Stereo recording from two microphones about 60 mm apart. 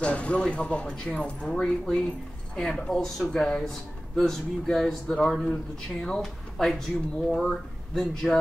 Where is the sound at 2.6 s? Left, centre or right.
Centre.